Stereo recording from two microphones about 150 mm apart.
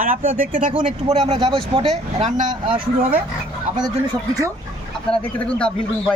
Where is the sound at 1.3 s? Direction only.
35° right (ahead or behind).